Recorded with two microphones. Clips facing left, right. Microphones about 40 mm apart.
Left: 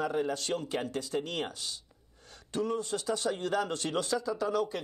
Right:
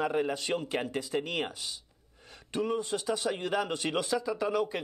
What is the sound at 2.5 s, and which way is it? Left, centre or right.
Speech, centre.